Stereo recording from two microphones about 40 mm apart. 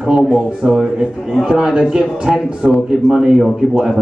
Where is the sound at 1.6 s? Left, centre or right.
Centre.